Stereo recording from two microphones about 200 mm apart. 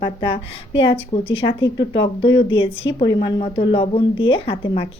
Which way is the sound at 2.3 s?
65° left (ahead or behind).